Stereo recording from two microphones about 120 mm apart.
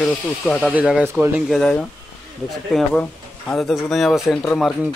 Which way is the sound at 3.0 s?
5° left (ahead or behind).